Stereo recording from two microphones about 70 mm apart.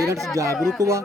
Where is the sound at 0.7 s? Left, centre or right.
Right.